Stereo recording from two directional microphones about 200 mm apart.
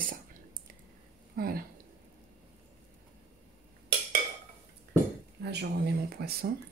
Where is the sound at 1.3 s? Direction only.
50° right (ahead or behind).